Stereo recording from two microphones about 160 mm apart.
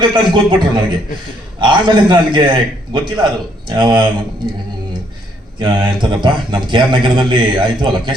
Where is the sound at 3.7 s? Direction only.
30° right (ahead or behind).